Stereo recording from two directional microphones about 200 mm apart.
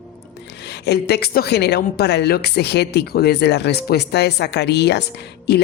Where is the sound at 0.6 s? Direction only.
55° left (ahead or behind).